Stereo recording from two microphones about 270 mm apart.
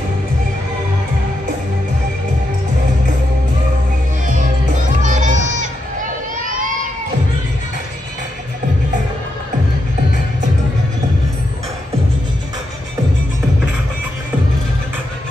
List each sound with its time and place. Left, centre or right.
5.0 s crowd: right